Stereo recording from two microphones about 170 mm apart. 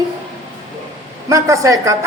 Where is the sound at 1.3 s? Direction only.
20° right (ahead or behind).